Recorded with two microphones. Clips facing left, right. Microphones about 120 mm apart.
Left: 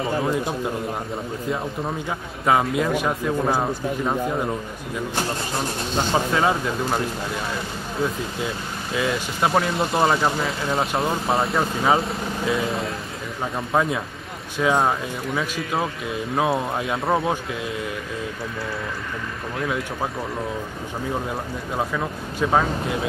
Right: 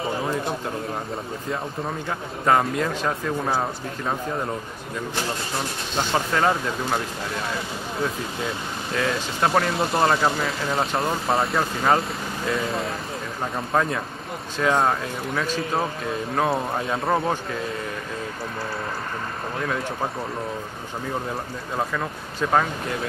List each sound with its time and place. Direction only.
2.0 s a man's voice: 5° left (ahead or behind)
5.9 s a man's voice: 5° left (ahead or behind)
8.9 s a man's voice: 5° left (ahead or behind)
22.5 s a man's voice: 5° left (ahead or behind)